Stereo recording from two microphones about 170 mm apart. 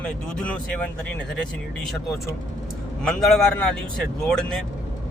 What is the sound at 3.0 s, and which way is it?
Speech, centre (ahead or behind).